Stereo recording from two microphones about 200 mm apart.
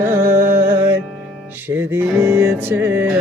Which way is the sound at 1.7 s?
10° right (ahead or behind).